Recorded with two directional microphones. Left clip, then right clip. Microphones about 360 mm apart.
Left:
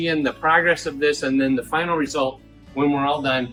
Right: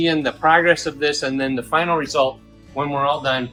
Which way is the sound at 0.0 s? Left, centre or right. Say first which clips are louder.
Right 3 dB; right.